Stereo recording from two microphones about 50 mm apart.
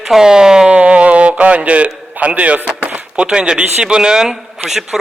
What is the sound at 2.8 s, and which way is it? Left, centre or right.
Chop, right.